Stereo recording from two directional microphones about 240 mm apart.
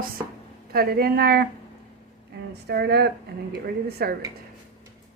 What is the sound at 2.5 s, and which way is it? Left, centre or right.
A woman's voice, right.